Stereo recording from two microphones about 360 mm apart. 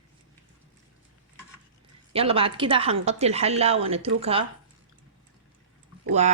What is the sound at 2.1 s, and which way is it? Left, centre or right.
Speech, centre.